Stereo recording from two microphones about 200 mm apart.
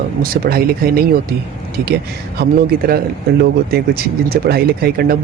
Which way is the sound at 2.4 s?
50° right (ahead or behind).